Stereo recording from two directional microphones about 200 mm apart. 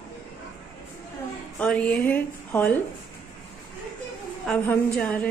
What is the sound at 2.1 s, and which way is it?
Speech, 10° left (ahead or behind).